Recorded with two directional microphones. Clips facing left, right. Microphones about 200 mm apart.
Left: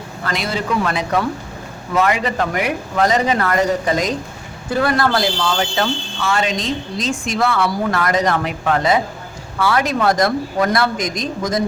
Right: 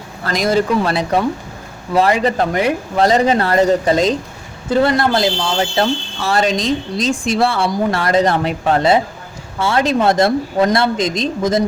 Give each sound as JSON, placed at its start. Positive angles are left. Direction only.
{"t": 0.3, "sound": "speech", "side_deg": -40}